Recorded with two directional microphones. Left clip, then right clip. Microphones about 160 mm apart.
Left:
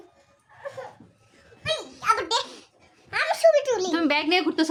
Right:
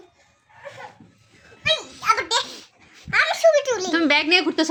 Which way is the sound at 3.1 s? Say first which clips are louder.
Right 3 dB; 20° left (ahead or behind).